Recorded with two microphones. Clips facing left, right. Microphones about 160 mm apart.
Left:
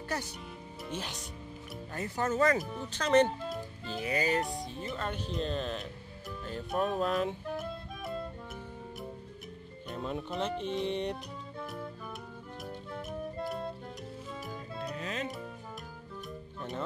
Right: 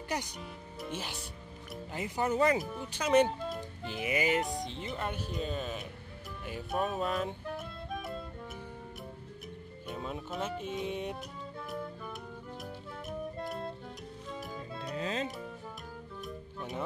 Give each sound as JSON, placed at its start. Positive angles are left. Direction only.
{"t": 0.1, "sound": "speech", "side_deg": -15}
{"t": 3.8, "sound": "speech", "side_deg": -15}
{"t": 9.8, "sound": "speech", "side_deg": 0}
{"t": 12.6, "sound": "music", "side_deg": 0}
{"t": 15.0, "sound": "music", "side_deg": -30}